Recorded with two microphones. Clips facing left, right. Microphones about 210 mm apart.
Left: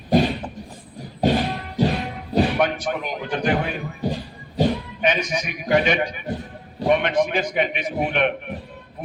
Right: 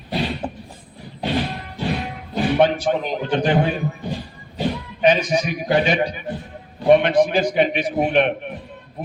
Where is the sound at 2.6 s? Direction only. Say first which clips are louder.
Right 5 dB; 30° right (ahead or behind).